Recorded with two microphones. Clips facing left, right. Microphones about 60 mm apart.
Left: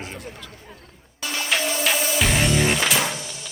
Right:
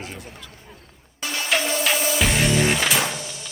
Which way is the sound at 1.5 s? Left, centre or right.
Centre.